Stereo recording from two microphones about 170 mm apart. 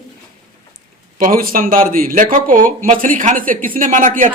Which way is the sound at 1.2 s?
55° right (ahead or behind).